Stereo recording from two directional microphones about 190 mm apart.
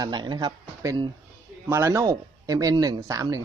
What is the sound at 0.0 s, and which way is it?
Speech, 25° right (ahead or behind).